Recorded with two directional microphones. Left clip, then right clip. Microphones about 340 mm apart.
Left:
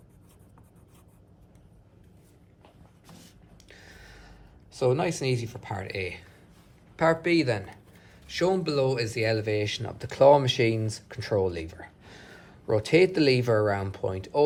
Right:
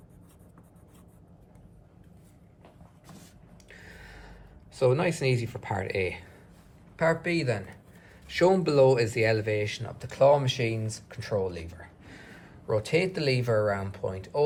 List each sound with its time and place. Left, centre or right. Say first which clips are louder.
3.7 s gasp: right 2 dB; centre
6.9 s speech: left 3 dB; centre
8.3 s speech: right 3 dB; centre